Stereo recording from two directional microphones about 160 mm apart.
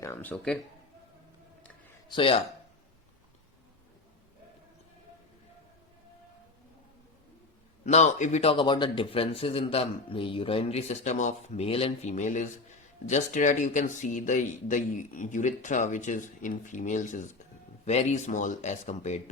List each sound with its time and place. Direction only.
0.0 s a sound: 15° left (ahead or behind)
2.0 s speech: 30° left (ahead or behind)
7.9 s speech: 45° left (ahead or behind)